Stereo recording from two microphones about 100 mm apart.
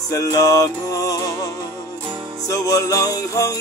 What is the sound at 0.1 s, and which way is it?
Music, 35° left (ahead or behind).